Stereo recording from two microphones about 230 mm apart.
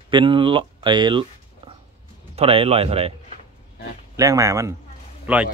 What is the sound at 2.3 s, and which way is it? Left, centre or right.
Speech, right.